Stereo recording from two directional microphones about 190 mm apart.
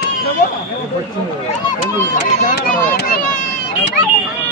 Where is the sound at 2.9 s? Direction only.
55° left (ahead or behind).